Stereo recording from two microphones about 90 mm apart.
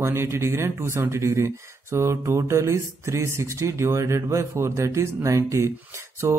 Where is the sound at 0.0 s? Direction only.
25° right (ahead or behind).